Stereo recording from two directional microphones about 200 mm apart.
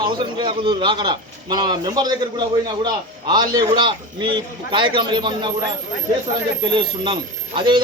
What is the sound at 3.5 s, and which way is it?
A man's voice, 20° right (ahead or behind).